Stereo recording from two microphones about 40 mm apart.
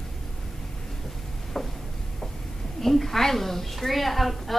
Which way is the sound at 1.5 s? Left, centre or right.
Centre.